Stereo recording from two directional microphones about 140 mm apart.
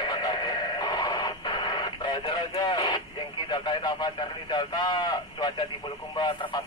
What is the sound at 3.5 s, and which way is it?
A man's voice, 30° left (ahead or behind).